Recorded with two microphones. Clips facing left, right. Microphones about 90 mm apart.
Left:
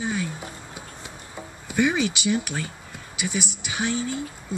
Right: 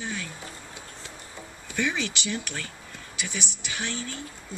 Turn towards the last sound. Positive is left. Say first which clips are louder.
# left 8 dB
turn(degrees=15)  # may be behind; listen again after turning